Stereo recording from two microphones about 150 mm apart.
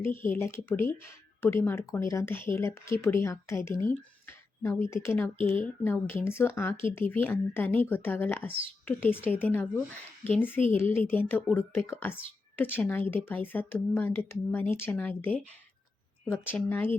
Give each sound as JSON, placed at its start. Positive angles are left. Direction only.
{"t": 0.0, "sound": "speech", "side_deg": 15}